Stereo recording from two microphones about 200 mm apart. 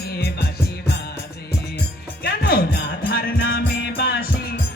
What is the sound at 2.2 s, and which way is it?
Music, 50° left (ahead or behind).